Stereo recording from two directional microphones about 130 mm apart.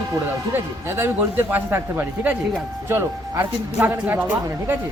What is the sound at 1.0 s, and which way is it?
A man's voice, 15° right (ahead or behind).